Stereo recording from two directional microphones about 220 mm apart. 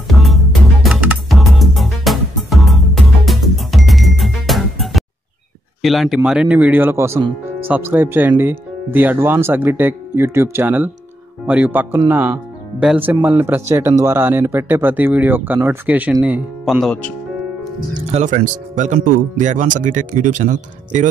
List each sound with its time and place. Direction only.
0.1 s music: centre (ahead or behind)
5.8 s speech: centre (ahead or behind)
18.1 s speech: 35° right (ahead or behind)